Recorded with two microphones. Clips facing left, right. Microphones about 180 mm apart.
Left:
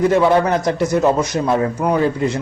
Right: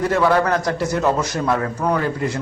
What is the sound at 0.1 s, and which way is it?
A man's voice, 20° left (ahead or behind).